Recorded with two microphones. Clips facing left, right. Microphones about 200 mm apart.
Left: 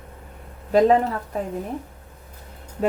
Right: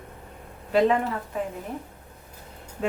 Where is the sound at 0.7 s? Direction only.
40° left (ahead or behind).